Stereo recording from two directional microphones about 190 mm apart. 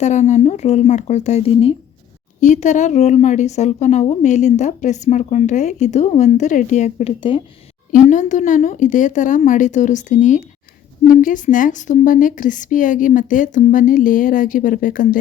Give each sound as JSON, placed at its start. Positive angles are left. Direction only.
{"t": 0.0, "sound": "a woman's voice", "side_deg": 40}
{"t": 7.2, "sound": "speech", "side_deg": 25}
{"t": 7.9, "sound": "a woman's voice", "side_deg": 40}